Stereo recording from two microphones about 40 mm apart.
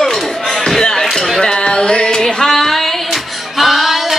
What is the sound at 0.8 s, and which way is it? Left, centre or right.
Music, centre.